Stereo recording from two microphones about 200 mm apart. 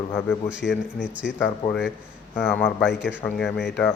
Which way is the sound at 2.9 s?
60° left (ahead or behind).